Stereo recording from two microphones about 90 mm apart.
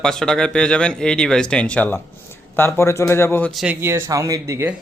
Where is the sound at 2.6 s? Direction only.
25° left (ahead or behind).